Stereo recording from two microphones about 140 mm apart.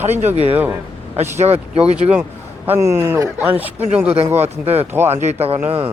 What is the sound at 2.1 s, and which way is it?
A man's voice, 10° right (ahead or behind).